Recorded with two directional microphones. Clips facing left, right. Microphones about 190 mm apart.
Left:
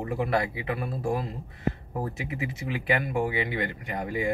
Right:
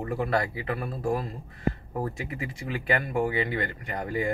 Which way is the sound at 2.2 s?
20° left (ahead or behind).